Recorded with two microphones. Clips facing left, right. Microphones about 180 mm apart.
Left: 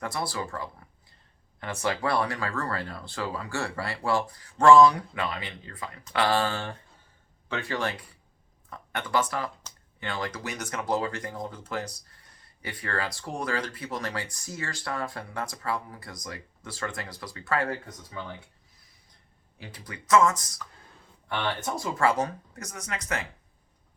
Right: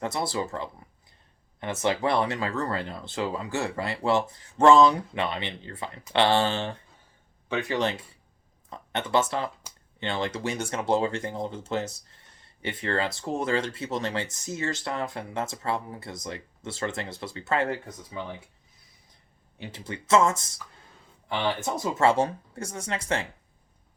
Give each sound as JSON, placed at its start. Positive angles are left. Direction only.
{"t": 0.0, "sound": "speech", "side_deg": -25}
{"t": 19.5, "sound": "speech", "side_deg": -25}
{"t": 21.6, "sound": "speech", "side_deg": -25}